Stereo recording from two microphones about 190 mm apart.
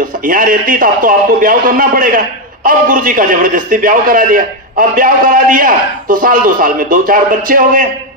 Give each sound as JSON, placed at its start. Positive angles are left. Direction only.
{"t": 0.3, "sound": "a man's voice", "side_deg": -50}